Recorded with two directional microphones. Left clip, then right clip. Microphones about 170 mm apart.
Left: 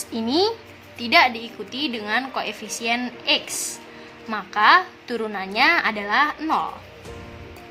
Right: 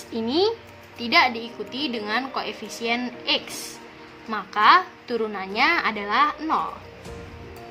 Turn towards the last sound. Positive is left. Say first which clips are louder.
# left 1 dB
turn(degrees=15)  # may be behind; listen again after turning